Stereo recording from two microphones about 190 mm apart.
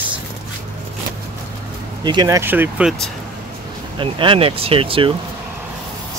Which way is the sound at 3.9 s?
25° right (ahead or behind).